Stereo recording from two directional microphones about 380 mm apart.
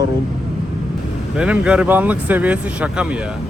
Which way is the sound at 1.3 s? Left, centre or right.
Centre.